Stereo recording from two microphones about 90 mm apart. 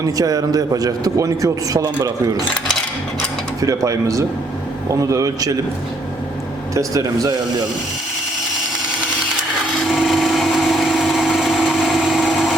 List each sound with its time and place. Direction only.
0.0 s a man's voice: 45° right (ahead or behind)
3.6 s speech: 40° right (ahead or behind)
6.7 s speech: 40° right (ahead or behind)
9.9 s a sound: centre (ahead or behind)